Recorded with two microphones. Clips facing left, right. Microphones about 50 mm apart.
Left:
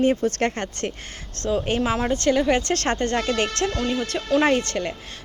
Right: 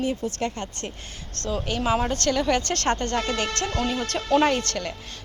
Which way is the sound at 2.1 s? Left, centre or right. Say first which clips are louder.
Left 3 dB; centre.